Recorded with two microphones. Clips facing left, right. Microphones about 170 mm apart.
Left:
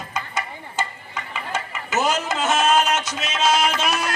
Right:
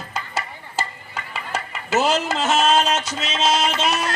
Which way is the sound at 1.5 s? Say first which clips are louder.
Right 3 dB; 35° right (ahead or behind).